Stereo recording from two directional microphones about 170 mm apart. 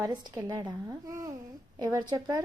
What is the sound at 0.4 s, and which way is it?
A child's voice, 20° right (ahead or behind).